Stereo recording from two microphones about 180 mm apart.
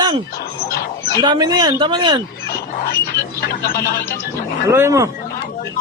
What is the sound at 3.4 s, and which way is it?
Speech, 60° left (ahead or behind).